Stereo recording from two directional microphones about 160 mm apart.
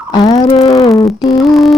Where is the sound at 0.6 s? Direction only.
20° left (ahead or behind).